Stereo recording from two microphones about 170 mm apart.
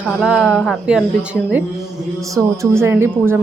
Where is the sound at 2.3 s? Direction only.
15° right (ahead or behind).